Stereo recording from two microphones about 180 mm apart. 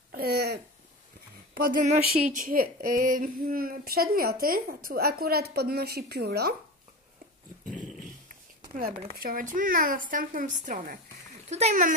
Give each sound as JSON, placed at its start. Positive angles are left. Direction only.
{"t": 0.1, "sound": "speech", "side_deg": -60}
{"t": 1.5, "sound": "speech", "side_deg": -50}
{"t": 7.6, "sound": "dog", "side_deg": 5}
{"t": 8.3, "sound": "a sound", "side_deg": -50}
{"t": 9.2, "sound": "a woman's voice", "side_deg": -50}